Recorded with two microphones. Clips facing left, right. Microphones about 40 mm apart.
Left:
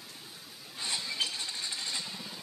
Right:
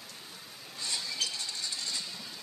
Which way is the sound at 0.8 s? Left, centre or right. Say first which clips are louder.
Left 2 dB; left.